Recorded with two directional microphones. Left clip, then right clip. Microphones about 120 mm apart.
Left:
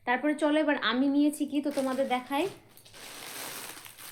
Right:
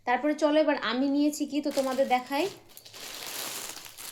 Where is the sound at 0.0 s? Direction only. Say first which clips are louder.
Right 2 dB; 10° right (ahead or behind).